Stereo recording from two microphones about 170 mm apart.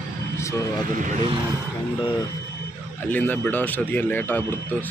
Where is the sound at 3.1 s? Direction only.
10° left (ahead or behind).